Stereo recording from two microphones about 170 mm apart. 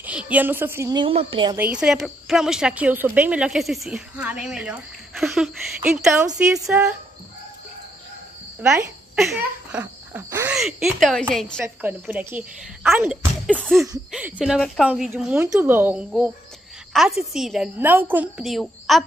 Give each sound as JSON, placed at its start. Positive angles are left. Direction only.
{"t": 0.0, "sound": "a woman's voice", "side_deg": -5}
{"t": 0.9, "sound": "speech", "side_deg": -30}
{"t": 1.6, "sound": "a woman's voice", "side_deg": -5}
{"t": 6.6, "sound": "a woman's voice", "side_deg": -15}
{"t": 9.1, "sound": "speech", "side_deg": -5}
{"t": 10.6, "sound": "a woman's voice", "side_deg": 0}
{"t": 11.6, "sound": "a woman's voice", "side_deg": -10}
{"t": 13.5, "sound": "a woman's voice", "side_deg": 0}